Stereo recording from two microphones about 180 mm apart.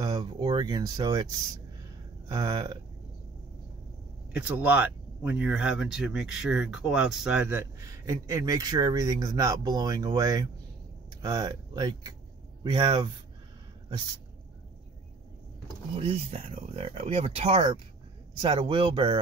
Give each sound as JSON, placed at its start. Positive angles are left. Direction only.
{"t": 0.0, "sound": "speech", "side_deg": -25}
{"t": 2.2, "sound": "speech", "side_deg": -20}
{"t": 4.3, "sound": "speech", "side_deg": -10}
{"t": 16.0, "sound": "speech", "side_deg": -35}